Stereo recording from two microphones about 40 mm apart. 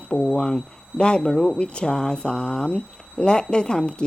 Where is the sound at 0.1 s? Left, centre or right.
Centre.